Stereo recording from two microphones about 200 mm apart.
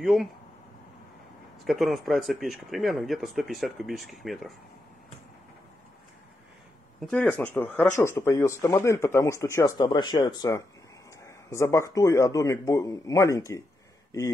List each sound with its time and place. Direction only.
0.0 s speech: centre (ahead or behind)
1.6 s speech: centre (ahead or behind)
7.0 s speech: 5° left (ahead or behind)